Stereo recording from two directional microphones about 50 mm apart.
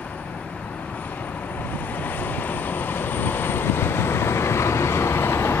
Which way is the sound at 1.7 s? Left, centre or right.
Left.